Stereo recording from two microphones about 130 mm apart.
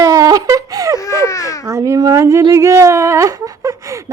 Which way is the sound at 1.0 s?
25° left (ahead or behind).